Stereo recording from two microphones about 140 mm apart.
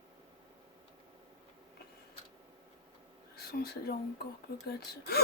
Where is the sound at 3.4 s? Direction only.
90° left.